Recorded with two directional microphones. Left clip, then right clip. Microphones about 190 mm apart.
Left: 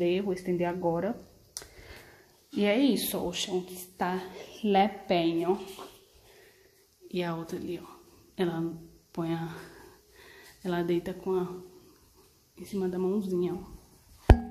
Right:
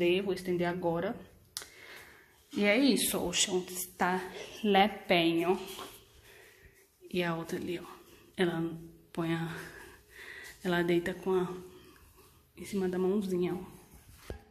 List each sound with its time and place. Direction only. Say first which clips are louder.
0.0 s speech: left 1 dB; 15° left (ahead or behind)
2.5 s a woman's voice: left 1 dB; 15° left (ahead or behind)
7.1 s a woman's voice: even; 10° left (ahead or behind)
12.5 s a woman's voice: left 1 dB; 5° left (ahead or behind)